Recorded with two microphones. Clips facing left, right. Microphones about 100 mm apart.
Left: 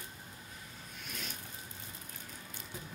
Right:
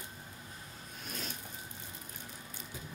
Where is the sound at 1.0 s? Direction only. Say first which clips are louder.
Right 3 dB; 35° right (ahead or behind).